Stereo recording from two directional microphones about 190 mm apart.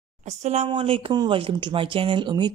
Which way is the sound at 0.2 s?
35° right (ahead or behind).